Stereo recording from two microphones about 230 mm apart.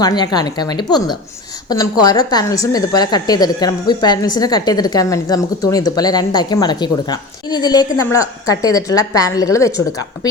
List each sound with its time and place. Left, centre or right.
0.0 s a woman's voice: centre